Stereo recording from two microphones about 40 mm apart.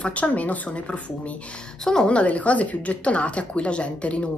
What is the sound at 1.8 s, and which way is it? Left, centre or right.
Speech, centre.